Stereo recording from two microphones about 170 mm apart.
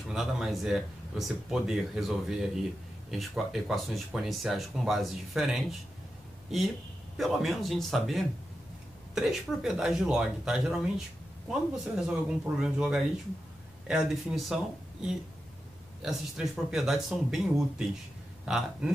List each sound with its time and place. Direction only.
0.1 s speech: 5° right (ahead or behind)
7.2 s speech: centre (ahead or behind)